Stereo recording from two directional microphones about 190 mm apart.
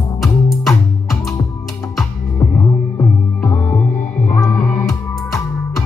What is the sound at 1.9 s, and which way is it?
Music, 5° left (ahead or behind).